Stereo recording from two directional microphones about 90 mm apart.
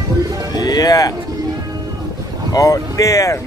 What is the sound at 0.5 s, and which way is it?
Music, 45° left (ahead or behind).